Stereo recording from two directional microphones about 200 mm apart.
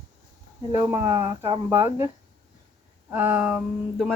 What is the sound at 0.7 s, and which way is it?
Speech, 15° right (ahead or behind).